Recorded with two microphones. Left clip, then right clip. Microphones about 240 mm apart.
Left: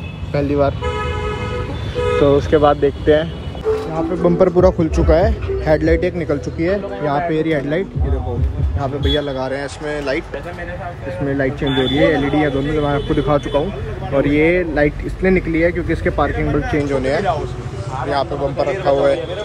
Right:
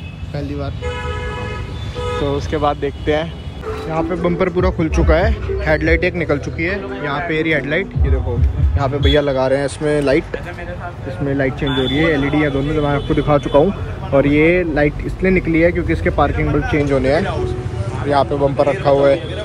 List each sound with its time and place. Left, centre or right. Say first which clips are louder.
0.3 s speech: left 8 dB; centre
2.0 s speech: left 7 dB; centre
3.9 s speech: left 1 dB; centre
4.4 s a man's voice: left 8 dB; left
6.6 s a man's voice: left 2 dB; left
9.0 s speech: right 6 dB; centre
11.2 s speech: right 1 dB; centre